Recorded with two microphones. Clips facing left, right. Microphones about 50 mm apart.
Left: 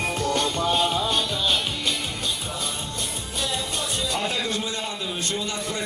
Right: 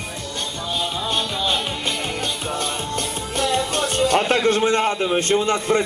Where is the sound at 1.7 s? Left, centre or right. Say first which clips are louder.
Right 3 dB; right.